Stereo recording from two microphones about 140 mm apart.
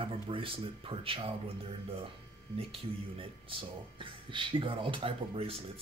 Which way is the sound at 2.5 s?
40° right (ahead or behind).